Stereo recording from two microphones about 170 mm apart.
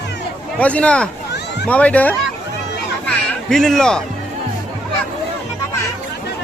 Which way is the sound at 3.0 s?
Centre (ahead or behind).